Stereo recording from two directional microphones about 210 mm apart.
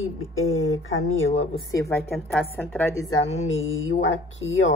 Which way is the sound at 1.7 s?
15° left (ahead or behind).